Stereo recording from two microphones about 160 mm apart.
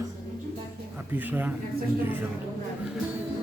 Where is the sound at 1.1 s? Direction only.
10° right (ahead or behind).